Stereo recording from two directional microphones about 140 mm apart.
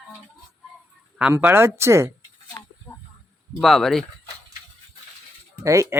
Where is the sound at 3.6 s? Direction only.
Centre (ahead or behind).